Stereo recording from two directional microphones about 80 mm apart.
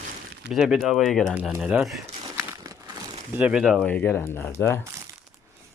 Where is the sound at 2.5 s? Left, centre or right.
Right.